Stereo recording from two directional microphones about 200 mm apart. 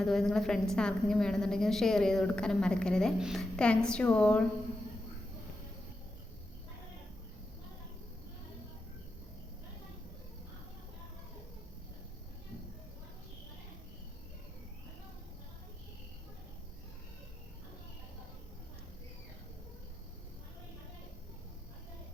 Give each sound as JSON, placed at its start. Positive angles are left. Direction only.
{"t": 0.0, "sound": "a woman's voice", "side_deg": 0}